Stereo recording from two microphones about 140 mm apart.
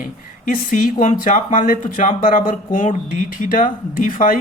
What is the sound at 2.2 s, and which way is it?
Speech, 75° left (ahead or behind).